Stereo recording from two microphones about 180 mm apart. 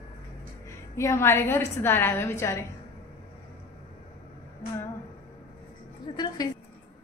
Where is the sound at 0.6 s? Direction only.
15° left (ahead or behind).